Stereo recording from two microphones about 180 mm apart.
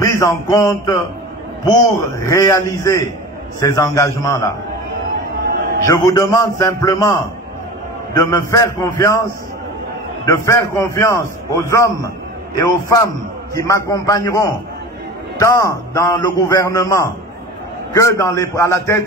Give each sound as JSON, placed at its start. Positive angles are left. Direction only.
{"t": 0.0, "sound": "a sound", "side_deg": 20}
{"t": 1.6, "sound": "a man's voice", "side_deg": 20}
{"t": 5.9, "sound": "a man's voice", "side_deg": 20}
{"t": 10.2, "sound": "a man's voice", "side_deg": 15}